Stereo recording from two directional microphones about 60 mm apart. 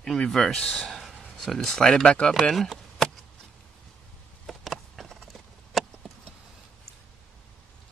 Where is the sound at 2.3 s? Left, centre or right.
Centre.